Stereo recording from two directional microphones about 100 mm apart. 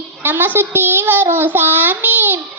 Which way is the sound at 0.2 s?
20° right (ahead or behind).